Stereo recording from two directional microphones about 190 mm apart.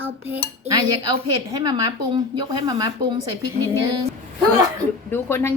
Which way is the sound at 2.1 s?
20° right (ahead or behind).